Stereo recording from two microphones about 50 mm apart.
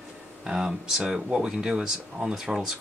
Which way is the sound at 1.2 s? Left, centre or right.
Centre.